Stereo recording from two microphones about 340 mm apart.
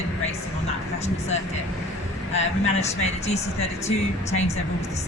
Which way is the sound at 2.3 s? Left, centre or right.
Centre.